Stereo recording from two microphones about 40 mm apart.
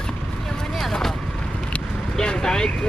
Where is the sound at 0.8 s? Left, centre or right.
Centre.